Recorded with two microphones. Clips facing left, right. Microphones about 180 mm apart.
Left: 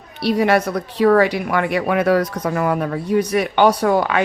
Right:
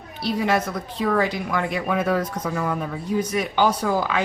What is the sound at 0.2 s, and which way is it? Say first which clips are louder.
A woman's voice: left 6 dB; 70° left (ahead or behind).